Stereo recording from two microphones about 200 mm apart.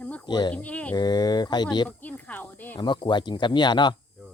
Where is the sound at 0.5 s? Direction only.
5° left (ahead or behind).